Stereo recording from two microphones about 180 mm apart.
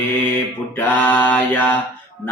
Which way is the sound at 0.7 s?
10° left (ahead or behind).